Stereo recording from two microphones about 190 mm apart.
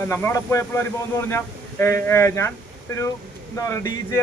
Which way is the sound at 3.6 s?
15° left (ahead or behind).